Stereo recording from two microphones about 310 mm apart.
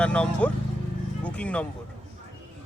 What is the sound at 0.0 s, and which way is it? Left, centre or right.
Speech, centre.